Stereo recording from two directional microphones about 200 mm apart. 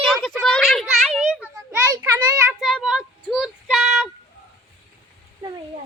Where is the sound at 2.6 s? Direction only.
Centre (ahead or behind).